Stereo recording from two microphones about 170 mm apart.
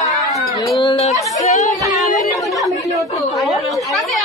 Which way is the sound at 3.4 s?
Centre (ahead or behind).